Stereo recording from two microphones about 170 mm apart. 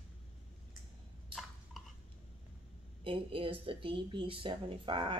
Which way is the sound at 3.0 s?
30° right (ahead or behind).